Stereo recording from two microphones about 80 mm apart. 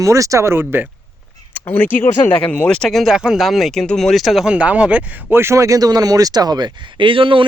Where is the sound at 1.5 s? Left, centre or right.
Left; by 4.5 s centre.